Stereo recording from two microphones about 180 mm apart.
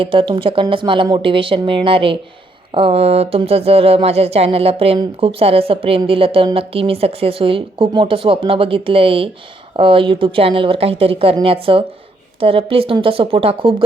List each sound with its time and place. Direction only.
0.0 s speech: 30° right (ahead or behind)